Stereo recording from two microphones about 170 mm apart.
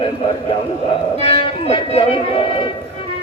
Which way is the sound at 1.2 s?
35° left (ahead or behind).